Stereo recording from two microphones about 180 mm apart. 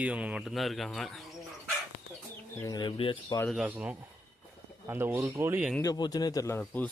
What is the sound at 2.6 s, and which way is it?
Speech, 20° left (ahead or behind).